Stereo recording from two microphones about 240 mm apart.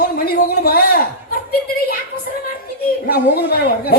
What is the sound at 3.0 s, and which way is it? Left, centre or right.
Speech, left.